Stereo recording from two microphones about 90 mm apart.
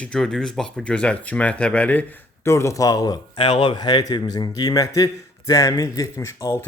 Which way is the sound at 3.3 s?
70° left (ahead or behind).